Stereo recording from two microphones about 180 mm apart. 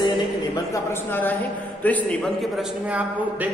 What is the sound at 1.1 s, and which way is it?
A man's voice, 10° left (ahead or behind).